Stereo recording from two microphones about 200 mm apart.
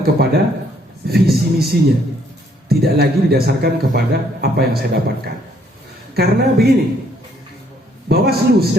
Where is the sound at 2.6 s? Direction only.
50° right (ahead or behind).